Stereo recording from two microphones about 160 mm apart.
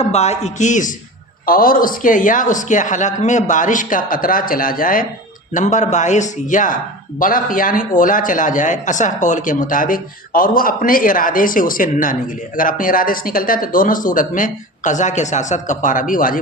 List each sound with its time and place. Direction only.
0.0 s a man's voice: 40° left (ahead or behind)
1.5 s a man's voice: 65° left (ahead or behind)
5.5 s a man's voice: 50° left (ahead or behind)